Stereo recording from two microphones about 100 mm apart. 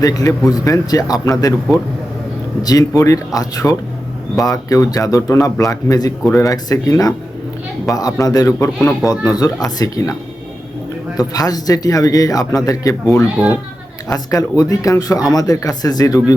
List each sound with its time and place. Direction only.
0.0 s a man's voice: 35° left (ahead or behind)
2.6 s a man's voice: 35° left (ahead or behind)
11.2 s a man's voice: 40° left (ahead or behind)
13.4 s a child's voice: 10° right (ahead or behind)
14.1 s a man's voice: 35° left (ahead or behind)